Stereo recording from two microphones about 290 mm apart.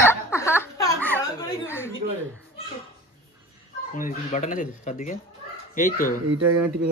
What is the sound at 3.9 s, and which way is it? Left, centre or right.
Speech, left.